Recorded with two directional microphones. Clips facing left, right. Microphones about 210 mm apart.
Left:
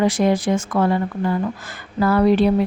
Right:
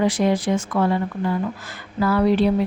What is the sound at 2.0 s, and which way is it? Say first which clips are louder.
Speech: left 2 dB; 50° left (ahead or behind).